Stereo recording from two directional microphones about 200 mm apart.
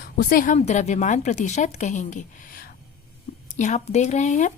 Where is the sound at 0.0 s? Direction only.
45° left (ahead or behind).